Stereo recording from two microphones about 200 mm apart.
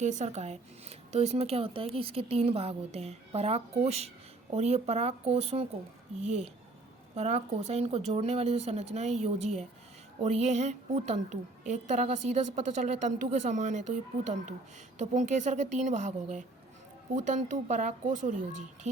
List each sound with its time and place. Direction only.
0.0 s a woman's voice: 35° right (ahead or behind)